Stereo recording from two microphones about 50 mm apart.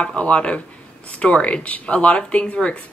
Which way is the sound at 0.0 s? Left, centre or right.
Left.